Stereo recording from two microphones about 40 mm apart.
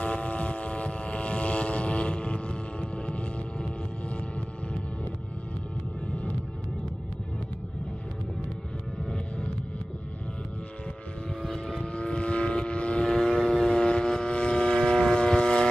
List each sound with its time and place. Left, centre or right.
0.0 s vehicle: left
11.4 s vehicle: centre
11.9 s vehicle: left